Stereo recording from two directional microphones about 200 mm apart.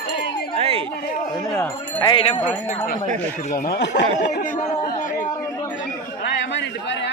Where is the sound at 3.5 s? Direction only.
55° left (ahead or behind).